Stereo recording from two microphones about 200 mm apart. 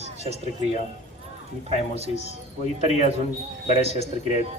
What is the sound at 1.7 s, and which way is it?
Speech, 30° right (ahead or behind).